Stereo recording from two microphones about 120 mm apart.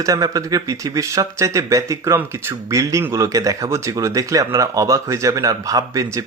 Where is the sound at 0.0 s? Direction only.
30° right (ahead or behind).